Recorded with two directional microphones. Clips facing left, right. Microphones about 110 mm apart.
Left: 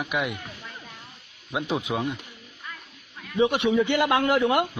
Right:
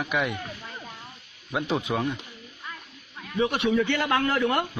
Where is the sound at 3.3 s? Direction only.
20° left (ahead or behind).